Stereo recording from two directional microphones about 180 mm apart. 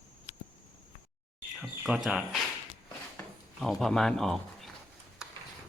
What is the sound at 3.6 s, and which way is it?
Speech, centre (ahead or behind).